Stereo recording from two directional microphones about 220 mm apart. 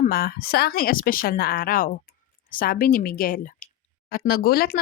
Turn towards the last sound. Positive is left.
turn(degrees=45)  # may be behind; listen again after turning